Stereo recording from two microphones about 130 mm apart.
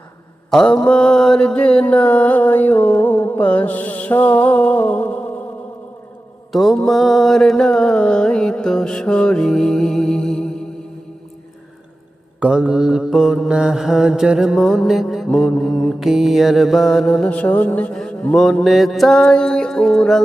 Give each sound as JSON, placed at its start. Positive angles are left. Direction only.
{"t": 0.5, "sound": "mantra", "side_deg": 5}
{"t": 6.5, "sound": "mantra", "side_deg": 0}
{"t": 12.4, "sound": "mantra", "side_deg": -10}